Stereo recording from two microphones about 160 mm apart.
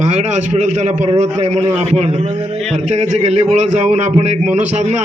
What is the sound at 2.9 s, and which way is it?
A man's voice, 45° right (ahead or behind).